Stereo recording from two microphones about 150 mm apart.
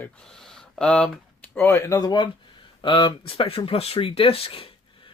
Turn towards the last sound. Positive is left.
turn(degrees=40)  # may be behind; listen again after turning